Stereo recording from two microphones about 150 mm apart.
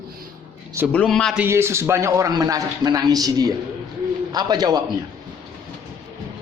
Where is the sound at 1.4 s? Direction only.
15° right (ahead or behind).